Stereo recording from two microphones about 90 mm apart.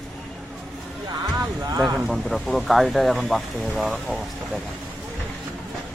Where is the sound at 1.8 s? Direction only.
Centre (ahead or behind).